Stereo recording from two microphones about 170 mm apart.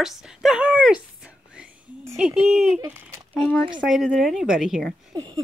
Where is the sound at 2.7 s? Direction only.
15° right (ahead or behind).